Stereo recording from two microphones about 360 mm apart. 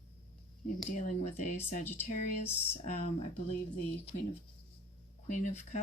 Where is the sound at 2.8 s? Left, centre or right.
Centre.